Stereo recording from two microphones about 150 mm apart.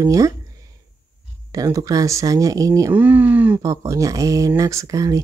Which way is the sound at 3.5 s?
20° right (ahead or behind).